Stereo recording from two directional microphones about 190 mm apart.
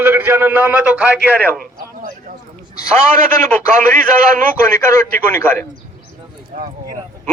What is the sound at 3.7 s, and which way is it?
Speech, 40° right (ahead or behind).